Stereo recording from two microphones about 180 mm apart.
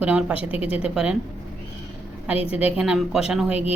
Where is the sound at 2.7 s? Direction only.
5° right (ahead or behind).